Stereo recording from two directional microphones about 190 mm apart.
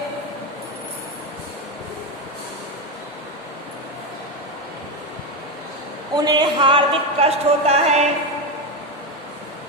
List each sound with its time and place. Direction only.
6.1 s speech: 20° right (ahead or behind)